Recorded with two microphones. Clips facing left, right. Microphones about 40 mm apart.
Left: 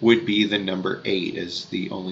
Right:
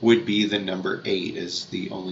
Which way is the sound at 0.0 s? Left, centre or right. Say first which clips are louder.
Left 1 dB; centre.